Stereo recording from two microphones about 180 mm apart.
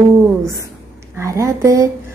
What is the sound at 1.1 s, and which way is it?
Speech, 15° right (ahead or behind).